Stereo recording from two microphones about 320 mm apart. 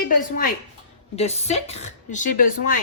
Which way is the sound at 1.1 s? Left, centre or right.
Centre.